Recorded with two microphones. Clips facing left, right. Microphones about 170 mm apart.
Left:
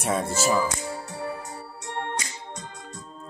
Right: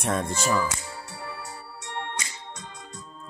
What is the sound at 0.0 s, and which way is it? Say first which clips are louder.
Speech: left 1 dB; 5° left (ahead or behind).